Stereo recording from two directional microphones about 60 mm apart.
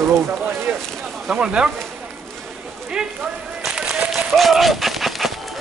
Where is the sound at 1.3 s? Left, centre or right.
Centre.